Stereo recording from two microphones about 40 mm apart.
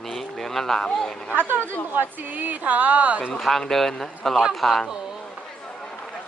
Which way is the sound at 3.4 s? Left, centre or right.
Centre.